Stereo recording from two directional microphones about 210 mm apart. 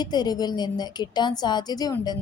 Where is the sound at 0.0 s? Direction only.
20° left (ahead or behind).